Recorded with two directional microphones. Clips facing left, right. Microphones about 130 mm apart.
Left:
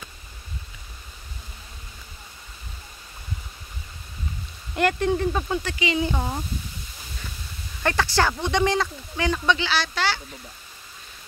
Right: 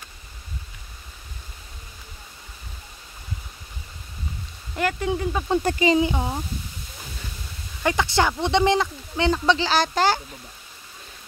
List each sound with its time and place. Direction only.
4.7 s speech: 5° right (ahead or behind)
5.6 s speech: 45° right (ahead or behind)
5.9 s speech: 15° right (ahead or behind)
7.8 s speech: 15° right (ahead or behind); by 10.2 s 45° right (ahead or behind)